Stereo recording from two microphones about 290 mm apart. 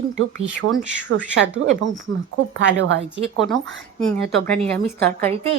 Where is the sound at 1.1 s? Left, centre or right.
Right.